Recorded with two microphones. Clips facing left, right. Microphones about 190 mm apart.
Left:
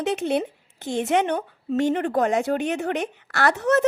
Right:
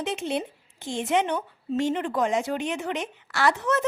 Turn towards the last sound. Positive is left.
turn(degrees=65)  # may be behind; listen again after turning